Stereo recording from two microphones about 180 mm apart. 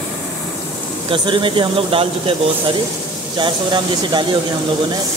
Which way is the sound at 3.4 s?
25° right (ahead or behind).